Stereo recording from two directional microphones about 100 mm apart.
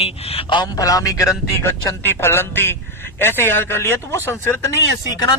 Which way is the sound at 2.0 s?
25° left (ahead or behind).